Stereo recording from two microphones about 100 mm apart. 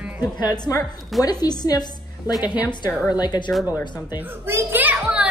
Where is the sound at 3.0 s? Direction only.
45° left (ahead or behind).